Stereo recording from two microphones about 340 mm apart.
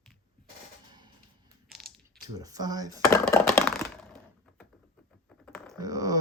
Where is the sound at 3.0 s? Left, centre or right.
Centre.